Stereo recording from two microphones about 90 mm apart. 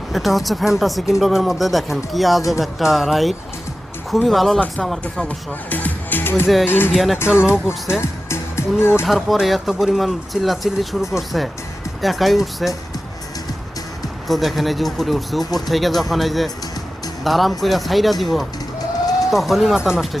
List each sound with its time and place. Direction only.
0.1 s speech: centre (ahead or behind)
5.0 s speech: 10° left (ahead or behind)
6.9 s speech: centre (ahead or behind)
7.9 s speech: 30° left (ahead or behind)
9.0 s speech: centre (ahead or behind)
14.3 s speech: centre (ahead or behind)